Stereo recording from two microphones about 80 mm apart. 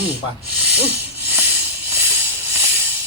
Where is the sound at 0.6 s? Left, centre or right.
Right.